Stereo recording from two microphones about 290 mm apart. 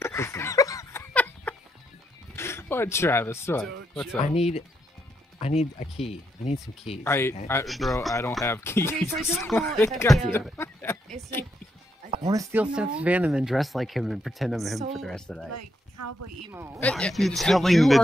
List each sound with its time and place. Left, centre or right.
0.0 s a sound: centre
2.3 s speech: centre
4.2 s speech: left
7.0 s speech: centre
12.3 s speech: centre
15.5 s speech: right
16.5 s speech: centre